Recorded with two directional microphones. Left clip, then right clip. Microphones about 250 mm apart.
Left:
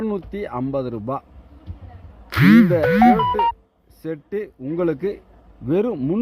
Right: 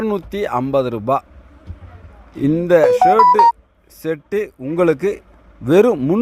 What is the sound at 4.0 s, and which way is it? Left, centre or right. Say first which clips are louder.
A man's voice: right 7 dB; centre.